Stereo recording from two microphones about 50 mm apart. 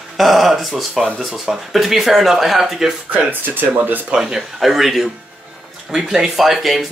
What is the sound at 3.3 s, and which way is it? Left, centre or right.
Speech, right.